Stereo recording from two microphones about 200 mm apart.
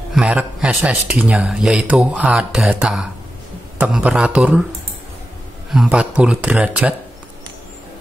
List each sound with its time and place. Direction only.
0.1 s speech: 5° right (ahead or behind)
5.7 s speech: 5° right (ahead or behind)